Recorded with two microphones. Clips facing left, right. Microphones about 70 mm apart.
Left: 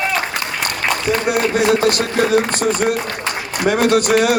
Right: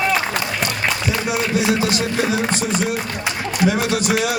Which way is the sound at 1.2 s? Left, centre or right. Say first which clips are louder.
Left 3 dB; left.